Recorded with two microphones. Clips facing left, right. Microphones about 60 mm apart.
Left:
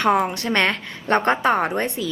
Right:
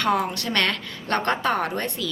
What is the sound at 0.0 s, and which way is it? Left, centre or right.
A woman's voice, left.